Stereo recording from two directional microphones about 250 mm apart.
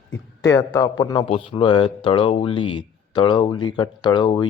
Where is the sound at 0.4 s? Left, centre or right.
Centre.